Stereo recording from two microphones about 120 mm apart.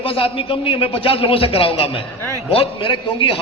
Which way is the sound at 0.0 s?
50° left (ahead or behind).